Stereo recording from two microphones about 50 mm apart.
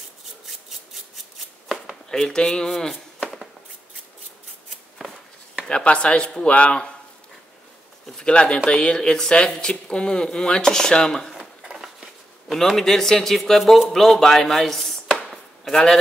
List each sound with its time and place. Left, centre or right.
0.5 s a sound: centre
2.0 s speech: centre
5.6 s speech: centre
8.2 s speech: left
11.3 s a sound: centre
12.4 s a man's voice: centre
15.2 s chop: centre